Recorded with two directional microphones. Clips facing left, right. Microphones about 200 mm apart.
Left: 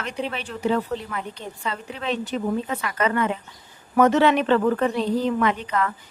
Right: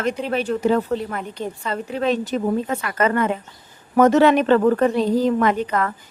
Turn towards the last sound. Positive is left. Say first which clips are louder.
# right 3 dB
turn(degrees=-45)  # may be behind; listen again after turning